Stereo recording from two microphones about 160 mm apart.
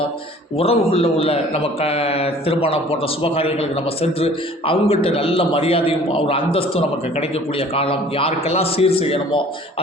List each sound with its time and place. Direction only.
0.6 s a man's voice: 35° left (ahead or behind)